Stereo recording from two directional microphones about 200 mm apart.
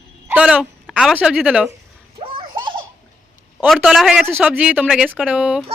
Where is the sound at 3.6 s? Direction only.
Centre (ahead or behind).